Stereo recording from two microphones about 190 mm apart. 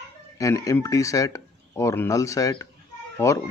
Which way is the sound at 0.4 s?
15° left (ahead or behind).